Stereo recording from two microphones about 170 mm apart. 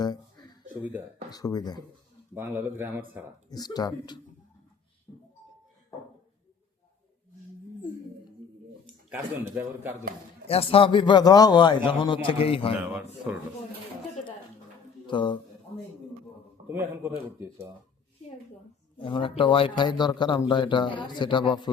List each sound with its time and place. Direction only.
0.0 s a sound: 25° left (ahead or behind)
0.7 s speech: 10° right (ahead or behind)
1.3 s a man's voice: 20° left (ahead or behind)
2.3 s speech: 10° right (ahead or behind)
3.5 s a man's voice: 25° left (ahead or behind)
9.0 s speech: 10° right (ahead or behind)
10.5 s a man's voice: 35° left (ahead or behind)
12.7 s speech: 5° right (ahead or behind)
15.0 s speech: 30° left (ahead or behind)
16.6 s speech: 10° right (ahead or behind)
18.9 s a man's voice: 30° left (ahead or behind)